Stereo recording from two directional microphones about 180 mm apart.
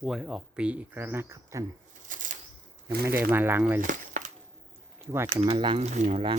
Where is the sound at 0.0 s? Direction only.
Centre (ahead or behind).